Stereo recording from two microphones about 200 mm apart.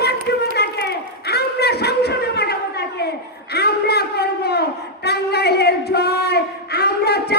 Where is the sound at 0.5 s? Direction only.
55° left (ahead or behind).